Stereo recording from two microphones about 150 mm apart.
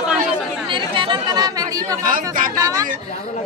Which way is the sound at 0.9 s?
30° right (ahead or behind).